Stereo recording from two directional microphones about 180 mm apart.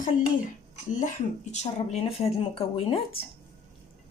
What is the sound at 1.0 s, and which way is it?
Speech, 40° left (ahead or behind).